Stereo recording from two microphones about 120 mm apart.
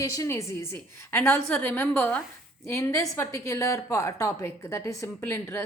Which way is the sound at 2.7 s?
25° left (ahead or behind).